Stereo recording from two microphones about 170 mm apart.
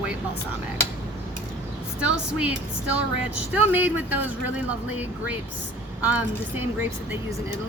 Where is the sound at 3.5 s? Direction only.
10° right (ahead or behind).